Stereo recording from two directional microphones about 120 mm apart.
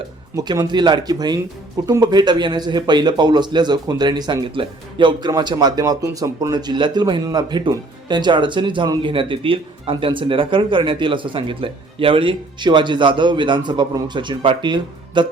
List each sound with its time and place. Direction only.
0.3 s speech: 30° right (ahead or behind)